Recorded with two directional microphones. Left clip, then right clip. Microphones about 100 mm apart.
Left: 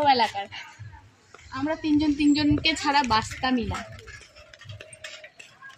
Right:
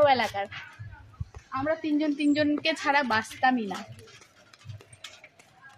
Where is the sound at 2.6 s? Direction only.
30° right (ahead or behind).